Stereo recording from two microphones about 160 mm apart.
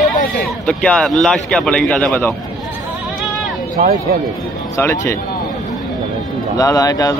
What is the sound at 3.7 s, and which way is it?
Speech, 70° right (ahead or behind).